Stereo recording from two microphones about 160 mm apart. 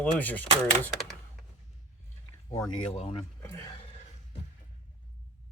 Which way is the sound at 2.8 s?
35° left (ahead or behind).